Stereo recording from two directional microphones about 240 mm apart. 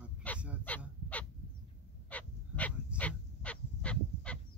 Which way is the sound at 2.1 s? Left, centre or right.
Centre.